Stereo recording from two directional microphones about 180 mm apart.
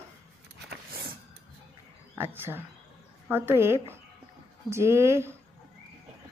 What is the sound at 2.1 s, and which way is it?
Speech, 10° right (ahead or behind).